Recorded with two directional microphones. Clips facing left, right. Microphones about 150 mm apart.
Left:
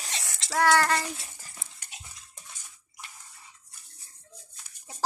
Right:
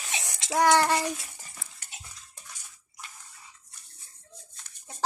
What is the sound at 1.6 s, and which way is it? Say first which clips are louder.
Dog: right 1 dB; 20° left (ahead or behind).